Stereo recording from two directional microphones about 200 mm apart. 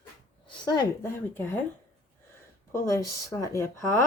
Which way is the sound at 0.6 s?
20° left (ahead or behind).